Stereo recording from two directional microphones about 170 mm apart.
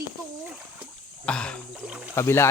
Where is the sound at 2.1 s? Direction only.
15° left (ahead or behind).